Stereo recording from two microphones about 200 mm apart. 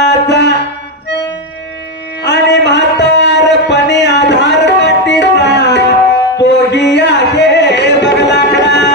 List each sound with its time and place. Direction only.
0.0 s music: 60° left (ahead or behind)
2.2 s a sound: 60° left (ahead or behind)
6.4 s music: 60° left (ahead or behind)